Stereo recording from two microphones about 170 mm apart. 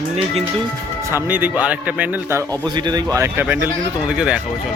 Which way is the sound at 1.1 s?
10° right (ahead or behind).